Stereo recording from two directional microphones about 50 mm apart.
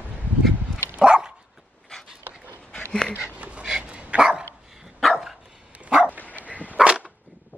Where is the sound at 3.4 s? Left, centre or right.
Right.